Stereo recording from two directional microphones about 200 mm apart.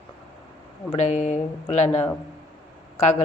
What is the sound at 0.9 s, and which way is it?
Speech, 35° left (ahead or behind).